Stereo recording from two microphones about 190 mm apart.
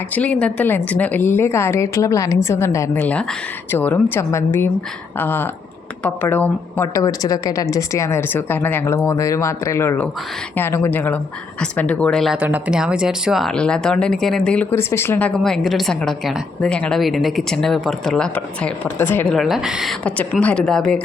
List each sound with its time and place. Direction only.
0.1 s a woman's voice: 5° left (ahead or behind)